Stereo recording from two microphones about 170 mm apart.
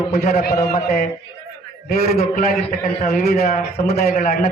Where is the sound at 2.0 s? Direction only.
60° left (ahead or behind).